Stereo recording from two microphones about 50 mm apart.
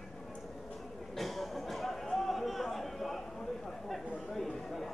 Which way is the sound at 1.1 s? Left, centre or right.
Centre.